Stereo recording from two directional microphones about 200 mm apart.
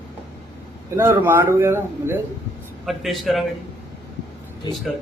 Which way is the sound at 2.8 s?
Centre (ahead or behind).